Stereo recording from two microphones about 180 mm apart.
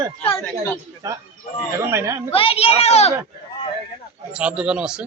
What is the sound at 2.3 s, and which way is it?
Speech, 30° left (ahead or behind).